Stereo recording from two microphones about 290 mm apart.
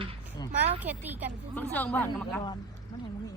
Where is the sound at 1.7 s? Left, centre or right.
Centre.